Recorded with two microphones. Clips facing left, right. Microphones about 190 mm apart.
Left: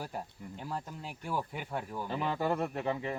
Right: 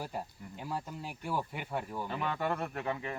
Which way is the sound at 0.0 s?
5° right (ahead or behind).